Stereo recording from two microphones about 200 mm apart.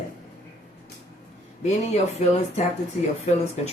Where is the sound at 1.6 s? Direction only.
35° left (ahead or behind).